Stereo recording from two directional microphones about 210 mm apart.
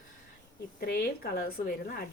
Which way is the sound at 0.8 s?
45° left (ahead or behind).